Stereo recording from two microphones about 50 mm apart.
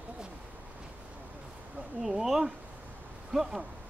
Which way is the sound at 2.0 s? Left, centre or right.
Centre.